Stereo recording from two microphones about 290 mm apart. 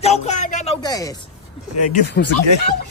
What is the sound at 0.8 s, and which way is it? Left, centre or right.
Speech, centre.